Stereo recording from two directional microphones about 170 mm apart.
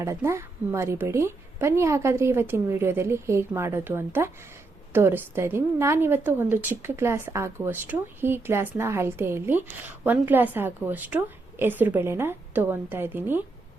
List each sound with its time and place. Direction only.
0.0 s a woman's voice: 15° right (ahead or behind)